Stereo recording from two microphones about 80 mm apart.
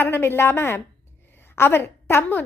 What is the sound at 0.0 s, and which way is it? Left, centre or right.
A woman's voice, left.